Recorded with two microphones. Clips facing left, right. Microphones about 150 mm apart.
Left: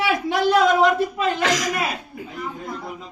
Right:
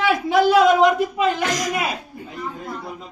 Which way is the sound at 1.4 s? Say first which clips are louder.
Left 1 dB; 90° left.